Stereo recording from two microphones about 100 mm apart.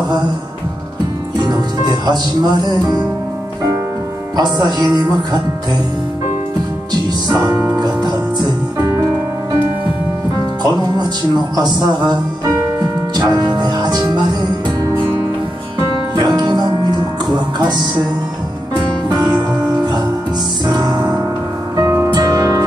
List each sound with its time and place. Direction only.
2.0 s speech: 45° right (ahead or behind)
4.4 s speech: 45° right (ahead or behind)
7.2 s music: 40° right (ahead or behind)
7.5 s music: 10° right (ahead or behind)
7.8 s music: 45° right (ahead or behind)
8.7 s music: 30° right (ahead or behind)
11.5 s speech: 45° right (ahead or behind)
13.3 s music: 40° right (ahead or behind)
16.2 s music: 45° right (ahead or behind)
19.0 s music: 40° right (ahead or behind)
20.6 s music: 40° right (ahead or behind)
21.7 s music: 30° right (ahead or behind)
22.1 s music: 40° right (ahead or behind)